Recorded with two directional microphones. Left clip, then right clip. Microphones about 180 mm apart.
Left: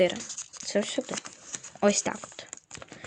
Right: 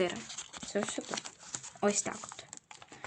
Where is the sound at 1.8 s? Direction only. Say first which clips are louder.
Left 7 dB; 30° left (ahead or behind).